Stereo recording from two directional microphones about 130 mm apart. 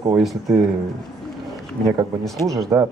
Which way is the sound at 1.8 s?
30° right (ahead or behind).